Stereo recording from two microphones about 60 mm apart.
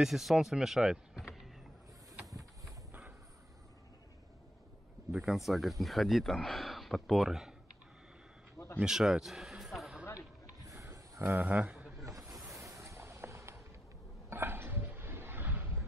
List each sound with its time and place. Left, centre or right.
0.0 s speech: centre
1.2 s vehicle: centre
5.1 s speech: centre
8.8 s a sound: centre
10.7 s pulleys: right
11.3 s a man's voice: right
12.4 s a sound: right